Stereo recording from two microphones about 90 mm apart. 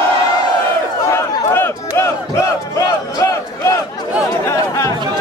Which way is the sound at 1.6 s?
30° left (ahead or behind).